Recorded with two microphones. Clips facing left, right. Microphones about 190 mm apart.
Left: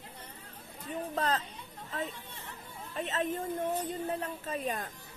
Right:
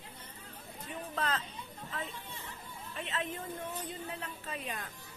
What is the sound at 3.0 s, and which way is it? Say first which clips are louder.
A woman's voice: left 6 dB; 40° left (ahead or behind).